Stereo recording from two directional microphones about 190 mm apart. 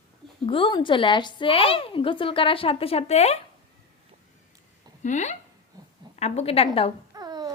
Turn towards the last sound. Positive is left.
turn(degrees=-20)  # may be behind; listen again after turning